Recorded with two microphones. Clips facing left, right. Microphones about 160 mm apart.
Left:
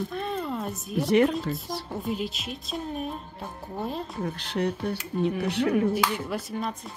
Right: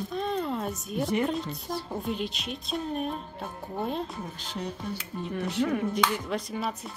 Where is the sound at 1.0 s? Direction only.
80° left.